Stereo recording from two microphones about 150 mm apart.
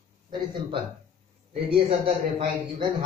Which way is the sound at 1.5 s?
40° right (ahead or behind).